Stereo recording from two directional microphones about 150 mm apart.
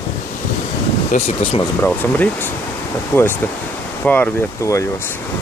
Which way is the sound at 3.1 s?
10° left (ahead or behind).